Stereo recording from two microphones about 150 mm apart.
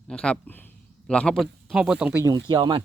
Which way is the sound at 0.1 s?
5° left (ahead or behind).